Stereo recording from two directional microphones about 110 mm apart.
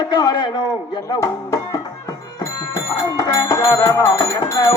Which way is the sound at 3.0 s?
30° left (ahead or behind).